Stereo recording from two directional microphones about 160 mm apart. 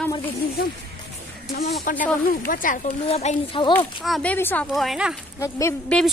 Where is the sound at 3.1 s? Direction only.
40° left (ahead or behind).